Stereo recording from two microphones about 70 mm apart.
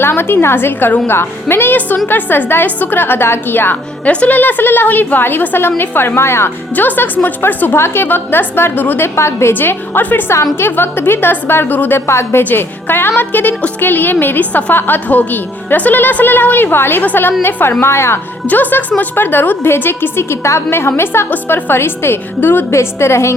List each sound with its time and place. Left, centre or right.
0.0 s a woman's voice: left
6.7 s a woman's voice: left
9.1 s a woman's voice: left
18.4 s a woman's voice: left